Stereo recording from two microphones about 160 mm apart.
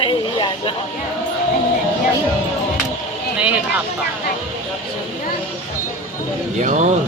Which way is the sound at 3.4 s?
10° right (ahead or behind).